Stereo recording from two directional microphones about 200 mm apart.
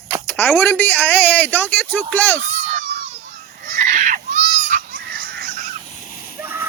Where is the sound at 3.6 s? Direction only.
40° right (ahead or behind).